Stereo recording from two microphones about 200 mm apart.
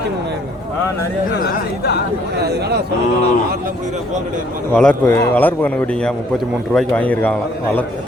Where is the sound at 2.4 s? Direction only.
55° right (ahead or behind).